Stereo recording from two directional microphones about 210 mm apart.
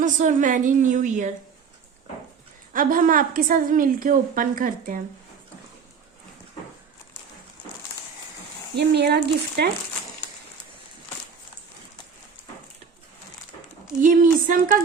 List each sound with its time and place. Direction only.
0.0 s a woman's voice: 35° right (ahead or behind)
2.7 s a woman's voice: 40° right (ahead or behind)
8.7 s speech: 55° right (ahead or behind)
14.0 s a woman's voice: 40° right (ahead or behind)